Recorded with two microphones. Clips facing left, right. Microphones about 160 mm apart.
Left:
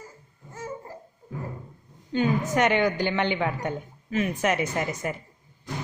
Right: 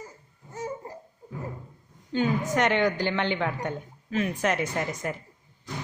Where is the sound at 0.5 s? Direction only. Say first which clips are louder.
Right 2 dB; 20° right (ahead or behind).